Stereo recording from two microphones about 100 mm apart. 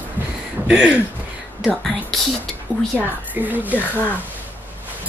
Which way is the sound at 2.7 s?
5° right (ahead or behind).